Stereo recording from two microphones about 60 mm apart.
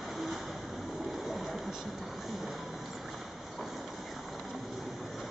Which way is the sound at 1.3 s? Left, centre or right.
Centre.